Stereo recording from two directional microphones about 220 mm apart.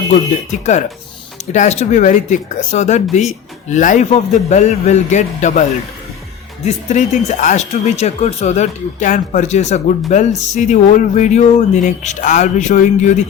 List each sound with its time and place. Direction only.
0.6 s speech: 30° left (ahead or behind)